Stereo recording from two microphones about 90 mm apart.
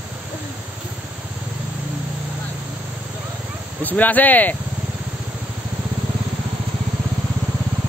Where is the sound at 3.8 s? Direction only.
20° left (ahead or behind).